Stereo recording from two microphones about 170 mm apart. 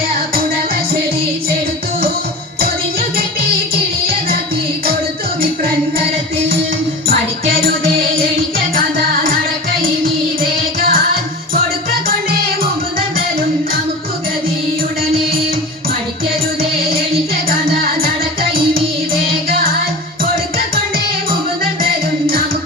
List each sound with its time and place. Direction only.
7.6 s music: 60° right (ahead or behind)
10.8 s music: 60° right (ahead or behind)